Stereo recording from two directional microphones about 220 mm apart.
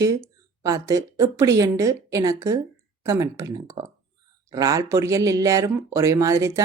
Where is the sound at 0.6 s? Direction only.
15° right (ahead or behind).